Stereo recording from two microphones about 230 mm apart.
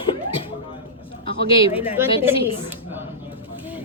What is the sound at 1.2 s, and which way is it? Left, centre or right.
Speech, left.